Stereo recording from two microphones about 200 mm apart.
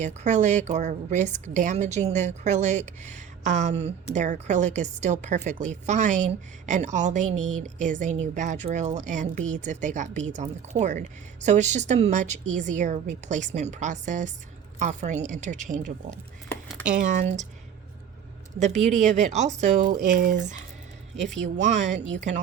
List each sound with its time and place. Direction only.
0.0 s a woman's voice: 35° right (ahead or behind)
16.5 s a sound: 5° left (ahead or behind)
17.1 s a woman's voice: 35° right (ahead or behind)
18.6 s a woman's voice: 35° right (ahead or behind)